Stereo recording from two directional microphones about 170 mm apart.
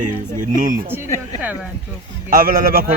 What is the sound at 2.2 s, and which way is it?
Speech, 55° right (ahead or behind).